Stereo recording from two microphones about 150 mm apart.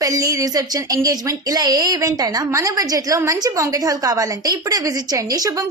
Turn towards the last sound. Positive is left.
turn(degrees=-20)  # may be behind; listen again after turning